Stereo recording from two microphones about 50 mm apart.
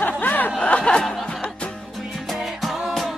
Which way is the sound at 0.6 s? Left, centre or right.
Centre.